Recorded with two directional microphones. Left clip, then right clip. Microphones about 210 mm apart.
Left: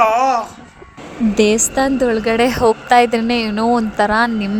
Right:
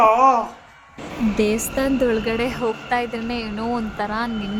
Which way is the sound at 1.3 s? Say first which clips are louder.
Left 8 dB; 30° left (ahead or behind).